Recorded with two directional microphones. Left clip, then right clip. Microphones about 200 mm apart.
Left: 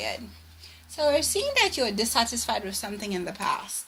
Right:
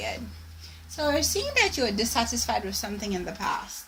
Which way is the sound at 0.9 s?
25° left (ahead or behind).